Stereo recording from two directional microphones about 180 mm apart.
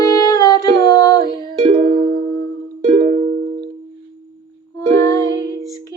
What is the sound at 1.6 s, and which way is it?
Music, 30° right (ahead or behind).